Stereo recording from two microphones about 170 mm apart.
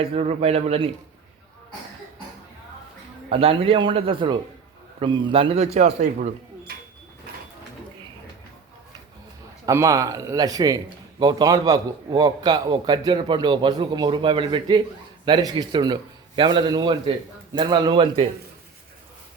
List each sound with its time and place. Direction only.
0.0 s a man's voice: 35° right (ahead or behind)
3.2 s a man's voice: 35° right (ahead or behind)
6.7 s a sound: 65° right (ahead or behind)
9.6 s a man's voice: 20° right (ahead or behind)